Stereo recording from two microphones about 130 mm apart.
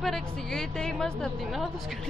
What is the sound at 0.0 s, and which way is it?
A woman's voice, centre (ahead or behind).